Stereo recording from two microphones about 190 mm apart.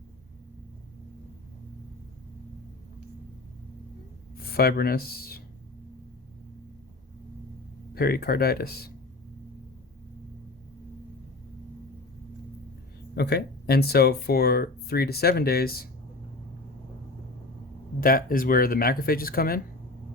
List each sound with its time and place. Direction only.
4.4 s speech: 50° left (ahead or behind)
7.9 s speech: 55° left (ahead or behind)
13.1 s speech: 60° left (ahead or behind)
18.0 s speech: 50° left (ahead or behind)